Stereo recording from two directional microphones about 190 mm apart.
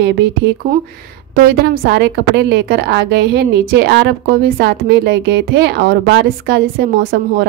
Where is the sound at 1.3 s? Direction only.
55° right (ahead or behind).